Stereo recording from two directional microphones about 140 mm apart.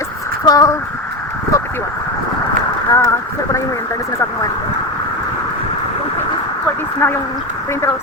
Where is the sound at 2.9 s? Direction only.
20° left (ahead or behind).